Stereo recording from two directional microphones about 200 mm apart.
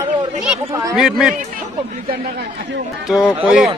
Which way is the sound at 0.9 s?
Centre (ahead or behind).